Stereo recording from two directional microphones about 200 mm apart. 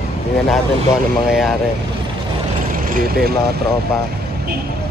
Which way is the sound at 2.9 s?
50° right (ahead or behind).